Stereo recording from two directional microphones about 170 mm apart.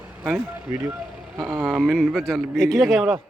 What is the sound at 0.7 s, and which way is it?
Speech, 15° right (ahead or behind).